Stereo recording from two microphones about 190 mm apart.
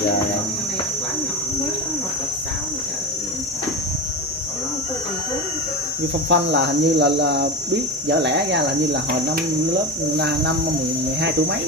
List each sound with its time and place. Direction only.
6.2 s speech: 65° right (ahead or behind)
10.1 s speech: 60° right (ahead or behind)